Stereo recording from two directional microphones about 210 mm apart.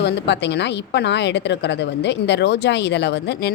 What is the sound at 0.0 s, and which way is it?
A woman's voice, 55° left (ahead or behind).